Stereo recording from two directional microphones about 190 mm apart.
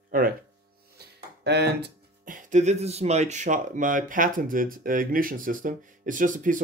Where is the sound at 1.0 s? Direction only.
60° right (ahead or behind).